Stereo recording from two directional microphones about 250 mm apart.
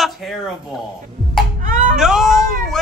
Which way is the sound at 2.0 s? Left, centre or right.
Centre.